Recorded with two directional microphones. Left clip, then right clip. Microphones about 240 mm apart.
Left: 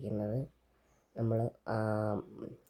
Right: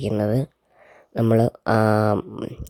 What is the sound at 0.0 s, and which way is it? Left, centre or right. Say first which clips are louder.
Speech: right 15 dB; right.